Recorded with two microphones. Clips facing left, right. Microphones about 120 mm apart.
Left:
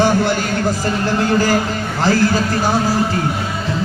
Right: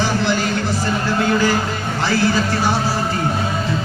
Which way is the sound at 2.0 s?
45° left (ahead or behind).